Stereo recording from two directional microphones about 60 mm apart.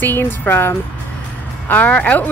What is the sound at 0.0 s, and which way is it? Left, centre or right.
Speech, left.